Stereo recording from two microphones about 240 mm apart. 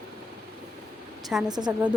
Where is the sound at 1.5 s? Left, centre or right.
Centre.